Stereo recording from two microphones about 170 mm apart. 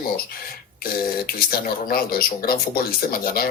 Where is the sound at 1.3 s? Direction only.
60° left (ahead or behind).